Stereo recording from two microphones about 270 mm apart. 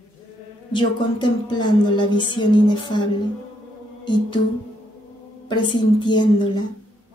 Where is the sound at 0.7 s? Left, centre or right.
Centre.